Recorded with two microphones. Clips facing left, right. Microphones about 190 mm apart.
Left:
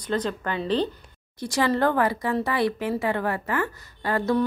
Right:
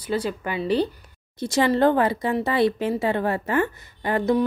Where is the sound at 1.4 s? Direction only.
25° right (ahead or behind).